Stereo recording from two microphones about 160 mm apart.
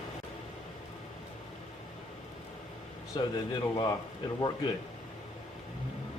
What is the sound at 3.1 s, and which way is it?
Speech, 30° left (ahead or behind).